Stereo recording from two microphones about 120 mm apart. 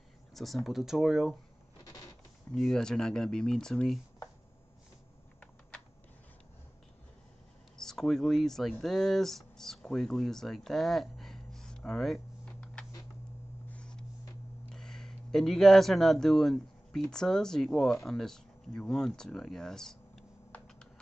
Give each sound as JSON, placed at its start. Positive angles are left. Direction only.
{"t": 0.3, "sound": "speech", "side_deg": 0}
{"t": 1.9, "sound": "a sound", "side_deg": 30}
{"t": 2.5, "sound": "speech", "side_deg": 5}
{"t": 7.7, "sound": "speech", "side_deg": 5}
{"t": 13.7, "sound": "a sound", "side_deg": 10}
{"t": 14.7, "sound": "speech", "side_deg": 5}